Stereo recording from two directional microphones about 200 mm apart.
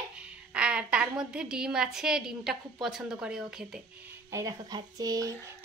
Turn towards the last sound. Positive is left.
turn(degrees=-20)  # may be behind; listen again after turning